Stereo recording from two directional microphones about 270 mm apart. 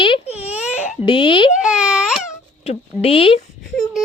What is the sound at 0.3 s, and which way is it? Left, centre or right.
Baby cry, centre.